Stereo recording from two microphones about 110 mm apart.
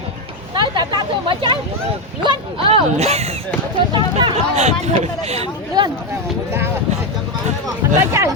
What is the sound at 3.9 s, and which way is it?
Speech, 45° right (ahead or behind).